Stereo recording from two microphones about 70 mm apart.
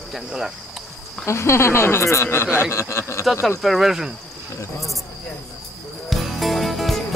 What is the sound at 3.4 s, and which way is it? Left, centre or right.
Cricket, centre.